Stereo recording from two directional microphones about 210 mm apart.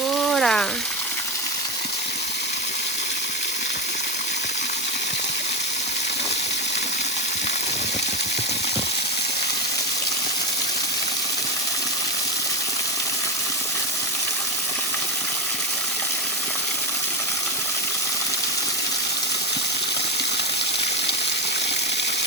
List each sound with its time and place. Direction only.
0.3 s frying: centre (ahead or behind)